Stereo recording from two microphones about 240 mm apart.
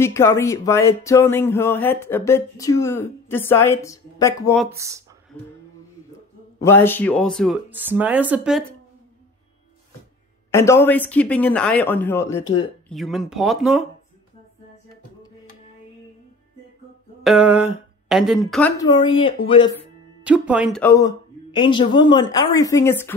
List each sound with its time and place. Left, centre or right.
0.0 s speech: centre
4.6 s speech: centre
6.6 s speech: centre
7.7 s speech: centre
10.5 s speech: centre
12.9 s speech: centre
17.2 s speech: centre
18.8 s speech: centre
20.2 s speech: centre
20.8 s speech: centre